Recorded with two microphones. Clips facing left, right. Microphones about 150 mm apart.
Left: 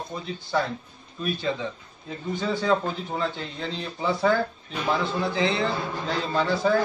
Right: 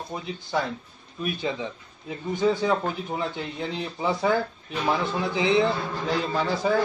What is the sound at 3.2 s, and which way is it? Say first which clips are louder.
A man's voice: even; 15° right (ahead or behind).